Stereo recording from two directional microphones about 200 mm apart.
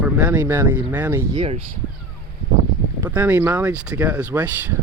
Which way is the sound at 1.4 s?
30° right (ahead or behind).